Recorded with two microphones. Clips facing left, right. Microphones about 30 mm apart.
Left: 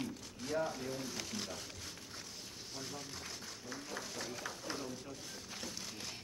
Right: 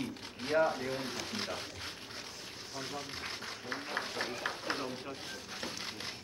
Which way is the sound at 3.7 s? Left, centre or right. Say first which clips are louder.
Right 7 dB; right.